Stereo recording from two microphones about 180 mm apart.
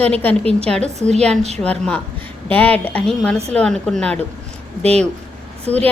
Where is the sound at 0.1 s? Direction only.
10° left (ahead or behind).